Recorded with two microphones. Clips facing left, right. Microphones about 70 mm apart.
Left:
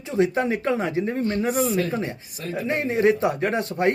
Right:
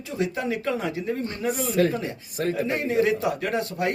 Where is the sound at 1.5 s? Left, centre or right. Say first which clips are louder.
Left 5 dB; left.